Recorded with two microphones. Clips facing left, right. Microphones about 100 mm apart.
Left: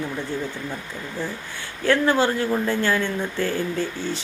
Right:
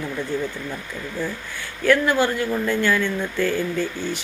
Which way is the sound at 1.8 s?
30° left (ahead or behind).